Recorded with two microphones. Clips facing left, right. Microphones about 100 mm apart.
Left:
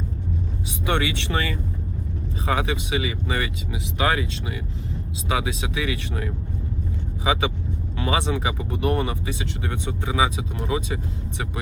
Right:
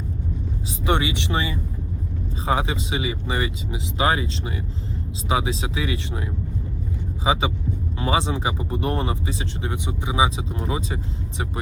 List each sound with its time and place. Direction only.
0.9 s speech: 20° right (ahead or behind)
7.9 s speech: 25° right (ahead or behind)